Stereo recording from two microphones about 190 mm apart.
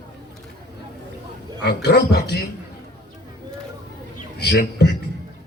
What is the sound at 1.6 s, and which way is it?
Speech, 60° left (ahead or behind).